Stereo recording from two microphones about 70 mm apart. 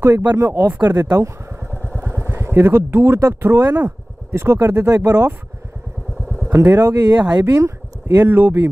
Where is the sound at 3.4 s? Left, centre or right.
Right.